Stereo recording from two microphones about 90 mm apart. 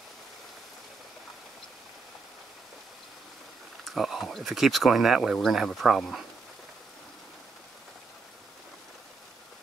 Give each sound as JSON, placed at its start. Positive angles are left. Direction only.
{"t": 3.8, "sound": "speech", "side_deg": 0}